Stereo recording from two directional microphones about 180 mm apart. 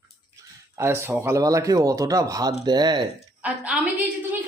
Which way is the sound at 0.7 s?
15° right (ahead or behind).